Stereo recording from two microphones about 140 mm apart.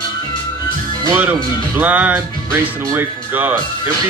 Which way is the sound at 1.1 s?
15° right (ahead or behind).